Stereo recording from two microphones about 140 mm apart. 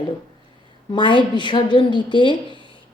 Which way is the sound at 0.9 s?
35° left (ahead or behind).